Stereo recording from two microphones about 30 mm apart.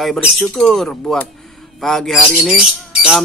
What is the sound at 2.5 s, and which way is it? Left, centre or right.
Speech, right.